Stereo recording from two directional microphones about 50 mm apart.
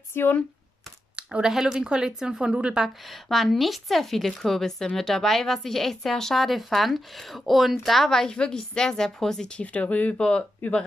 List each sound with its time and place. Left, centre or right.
0.1 s speech: left
1.4 s a woman's voice: centre
3.1 s a woman's voice: centre
9.6 s speech: left
10.1 s speech: centre
10.6 s speech: left